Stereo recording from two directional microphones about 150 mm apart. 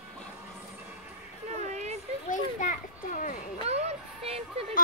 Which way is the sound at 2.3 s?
60° left (ahead or behind).